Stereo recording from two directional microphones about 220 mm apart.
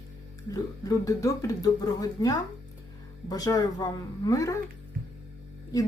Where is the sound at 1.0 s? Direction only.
15° left (ahead or behind).